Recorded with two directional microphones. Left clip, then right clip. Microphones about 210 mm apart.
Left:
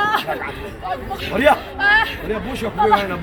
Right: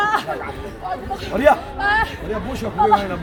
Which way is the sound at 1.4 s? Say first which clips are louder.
Even; 5° right (ahead or behind).